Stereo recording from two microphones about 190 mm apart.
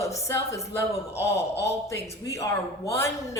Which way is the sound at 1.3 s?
60° left (ahead or behind).